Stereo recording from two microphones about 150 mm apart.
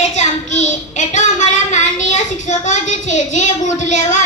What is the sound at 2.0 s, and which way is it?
A child's voice, 50° left (ahead or behind).